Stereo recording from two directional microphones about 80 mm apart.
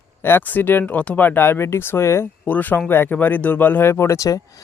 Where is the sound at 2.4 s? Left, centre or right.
Left.